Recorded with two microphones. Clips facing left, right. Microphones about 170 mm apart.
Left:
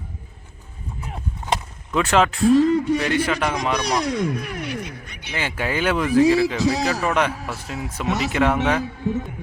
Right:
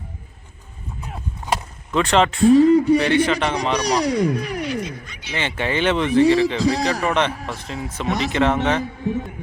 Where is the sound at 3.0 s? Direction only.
5° left (ahead or behind).